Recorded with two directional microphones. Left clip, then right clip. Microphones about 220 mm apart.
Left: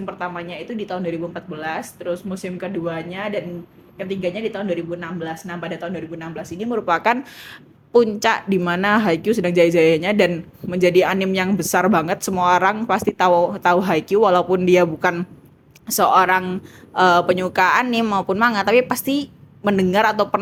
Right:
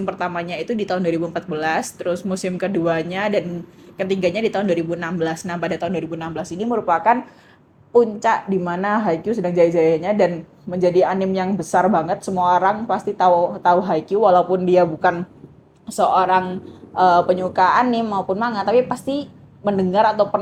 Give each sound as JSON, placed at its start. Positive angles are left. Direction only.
{"t": 0.0, "sound": "speech", "side_deg": -25}
{"t": 6.8, "sound": "speech", "side_deg": 35}